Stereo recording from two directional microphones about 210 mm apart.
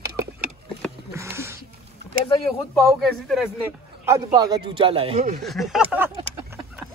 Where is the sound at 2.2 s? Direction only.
20° left (ahead or behind).